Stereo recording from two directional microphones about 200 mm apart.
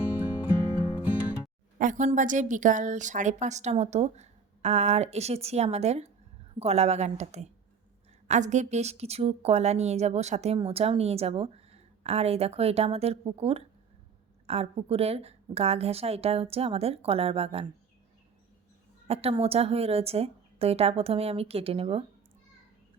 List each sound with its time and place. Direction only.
1.8 s a woman's voice: 40° right (ahead or behind)
19.0 s a woman's voice: 30° right (ahead or behind)